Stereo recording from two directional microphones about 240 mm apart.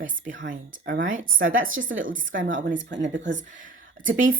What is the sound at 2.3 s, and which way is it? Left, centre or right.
Speech, right.